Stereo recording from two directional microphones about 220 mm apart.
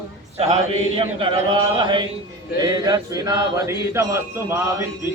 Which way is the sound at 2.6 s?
20° right (ahead or behind).